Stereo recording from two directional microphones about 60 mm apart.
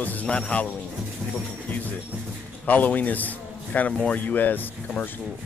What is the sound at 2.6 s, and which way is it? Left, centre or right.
A man's voice, left.